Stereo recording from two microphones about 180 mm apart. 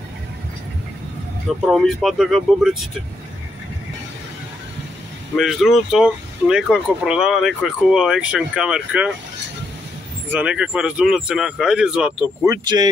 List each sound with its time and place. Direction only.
1.7 s speech: centre (ahead or behind)
5.3 s speech: centre (ahead or behind)
10.3 s speech: 5° right (ahead or behind)
12.4 s speech: 25° right (ahead or behind)